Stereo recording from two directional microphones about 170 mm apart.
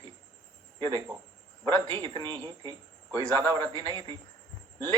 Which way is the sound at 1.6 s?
25° right (ahead or behind).